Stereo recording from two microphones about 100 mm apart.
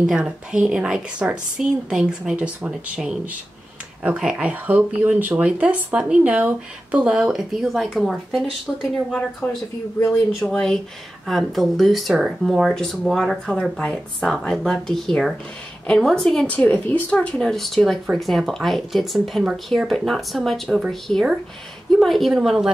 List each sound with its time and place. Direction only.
0.0 s speech: 10° right (ahead or behind)
9.4 s speech: 15° left (ahead or behind)
10.1 s speech: 5° left (ahead or behind)
16.4 s speech: 15° left (ahead or behind); by 22.7 s 5° right (ahead or behind)